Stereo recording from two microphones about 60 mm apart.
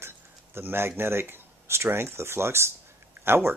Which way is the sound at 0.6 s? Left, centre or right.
Right.